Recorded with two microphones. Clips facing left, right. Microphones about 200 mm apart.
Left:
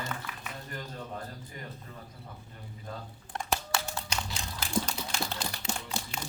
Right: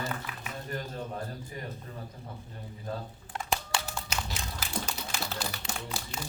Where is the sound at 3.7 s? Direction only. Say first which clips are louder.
Even; centre (ahead or behind).